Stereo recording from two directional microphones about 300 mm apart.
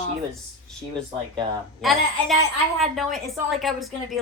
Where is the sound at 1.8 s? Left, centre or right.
Centre.